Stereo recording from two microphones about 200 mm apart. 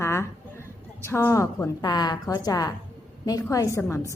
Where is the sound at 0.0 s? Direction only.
15° left (ahead or behind).